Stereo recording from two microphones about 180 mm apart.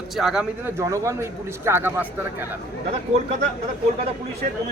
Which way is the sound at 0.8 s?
15° right (ahead or behind).